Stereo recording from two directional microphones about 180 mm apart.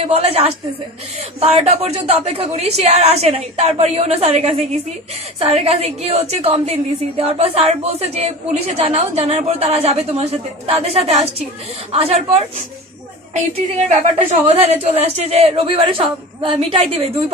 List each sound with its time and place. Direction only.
0.0 s a woman's voice: 35° right (ahead or behind)
13.8 s a woman's voice: 35° right (ahead or behind)